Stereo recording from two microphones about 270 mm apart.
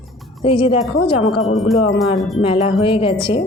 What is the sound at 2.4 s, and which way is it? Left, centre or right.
Speech, centre.